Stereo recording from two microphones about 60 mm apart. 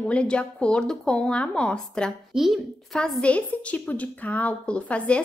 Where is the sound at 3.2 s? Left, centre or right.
Left.